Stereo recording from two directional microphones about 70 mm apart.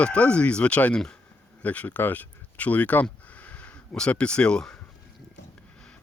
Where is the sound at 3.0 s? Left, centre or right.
Centre.